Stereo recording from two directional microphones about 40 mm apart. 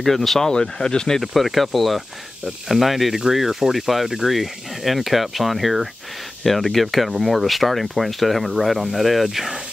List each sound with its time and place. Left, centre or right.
0.0 s speech: centre
0.5 s speech: centre
1.2 s speech: centre